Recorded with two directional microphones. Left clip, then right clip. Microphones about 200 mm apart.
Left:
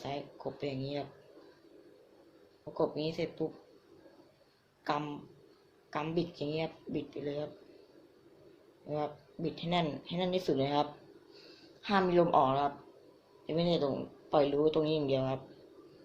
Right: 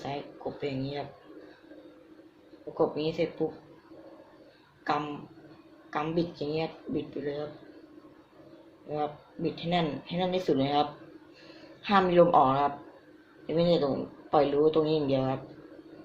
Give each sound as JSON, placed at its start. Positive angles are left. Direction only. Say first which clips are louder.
{"t": 0.6, "sound": "speech", "louder": "right 3 dB", "side_deg": 30}
{"t": 2.7, "sound": "speech", "louder": "right 5 dB", "side_deg": 30}
{"t": 4.8, "sound": "speech", "louder": "right 5 dB", "side_deg": 30}
{"t": 8.9, "sound": "speech", "louder": "right 4 dB", "side_deg": 30}